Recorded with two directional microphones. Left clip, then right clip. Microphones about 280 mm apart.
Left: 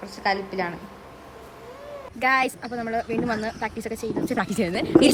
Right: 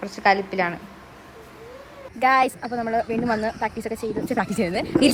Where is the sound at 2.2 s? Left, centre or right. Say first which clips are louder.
Right 3 dB; centre.